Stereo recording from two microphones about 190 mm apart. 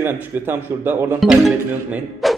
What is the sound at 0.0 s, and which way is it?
A man's voice, 10° right (ahead or behind).